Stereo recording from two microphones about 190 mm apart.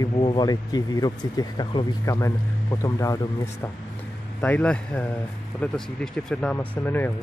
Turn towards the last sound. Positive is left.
turn(degrees=10)  # may be behind; listen again after turning